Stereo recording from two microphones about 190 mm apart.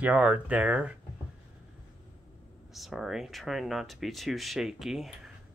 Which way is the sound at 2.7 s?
Centre (ahead or behind).